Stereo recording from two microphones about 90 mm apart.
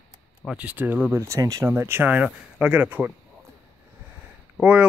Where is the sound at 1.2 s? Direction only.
35° right (ahead or behind).